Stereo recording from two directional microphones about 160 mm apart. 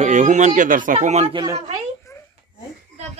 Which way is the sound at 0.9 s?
40° right (ahead or behind).